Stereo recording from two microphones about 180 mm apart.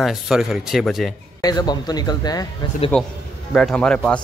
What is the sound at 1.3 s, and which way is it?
Speech, 20° left (ahead or behind).